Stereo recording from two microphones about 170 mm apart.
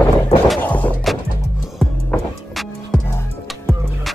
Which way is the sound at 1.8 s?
Centre (ahead or behind).